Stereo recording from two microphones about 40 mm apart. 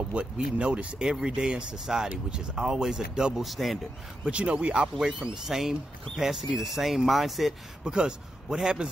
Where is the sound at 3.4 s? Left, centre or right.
Centre.